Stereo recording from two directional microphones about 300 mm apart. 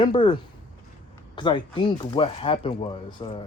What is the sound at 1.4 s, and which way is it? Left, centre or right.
Speech, centre.